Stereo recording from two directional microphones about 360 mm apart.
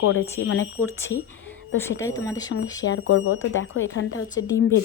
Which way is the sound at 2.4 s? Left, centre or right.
Left.